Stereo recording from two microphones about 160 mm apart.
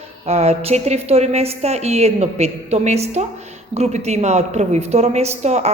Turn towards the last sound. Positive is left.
turn(degrees=-45)  # may be behind; listen again after turning